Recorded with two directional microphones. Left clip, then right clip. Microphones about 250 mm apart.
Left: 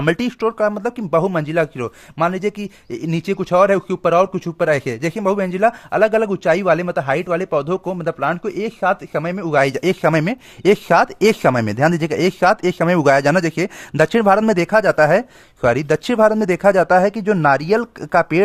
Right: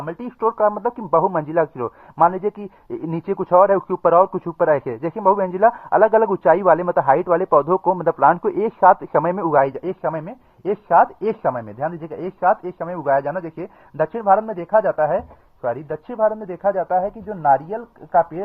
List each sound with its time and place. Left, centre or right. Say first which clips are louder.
0.0 s speech: left 4 dB; left; by 9.6 s centre
9.6 s speech: left 5 dB; left